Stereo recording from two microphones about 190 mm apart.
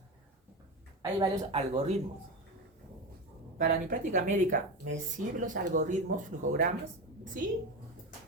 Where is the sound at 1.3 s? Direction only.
30° right (ahead or behind).